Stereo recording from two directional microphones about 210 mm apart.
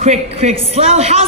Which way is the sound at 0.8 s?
30° right (ahead or behind).